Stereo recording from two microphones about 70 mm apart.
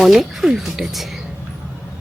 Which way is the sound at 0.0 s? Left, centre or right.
Centre.